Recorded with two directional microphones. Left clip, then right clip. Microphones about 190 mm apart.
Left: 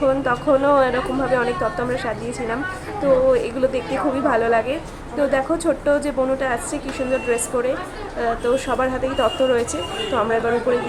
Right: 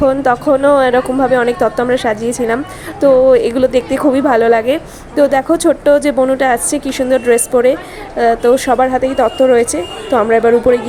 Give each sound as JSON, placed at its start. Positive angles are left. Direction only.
{"t": 0.0, "sound": "a woman's voice", "side_deg": -35}